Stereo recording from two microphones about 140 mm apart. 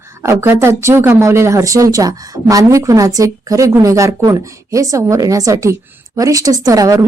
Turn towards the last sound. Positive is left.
turn(degrees=-25)  # may be behind; listen again after turning